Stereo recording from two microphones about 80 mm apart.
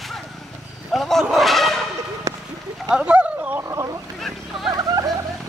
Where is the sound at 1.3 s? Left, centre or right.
Centre.